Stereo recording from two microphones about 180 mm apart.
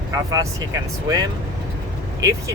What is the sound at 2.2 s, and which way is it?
Speech, 15° right (ahead or behind).